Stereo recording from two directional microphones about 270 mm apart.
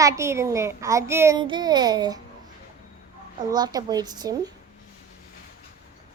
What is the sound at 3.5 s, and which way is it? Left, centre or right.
A child's voice, centre.